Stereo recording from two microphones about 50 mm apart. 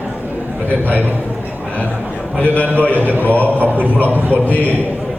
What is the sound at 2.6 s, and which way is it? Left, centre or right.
A man's voice, right.